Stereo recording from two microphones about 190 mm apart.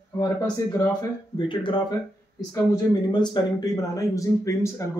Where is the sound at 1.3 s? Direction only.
25° left (ahead or behind).